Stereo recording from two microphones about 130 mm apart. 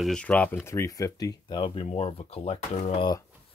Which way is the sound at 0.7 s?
25° left (ahead or behind).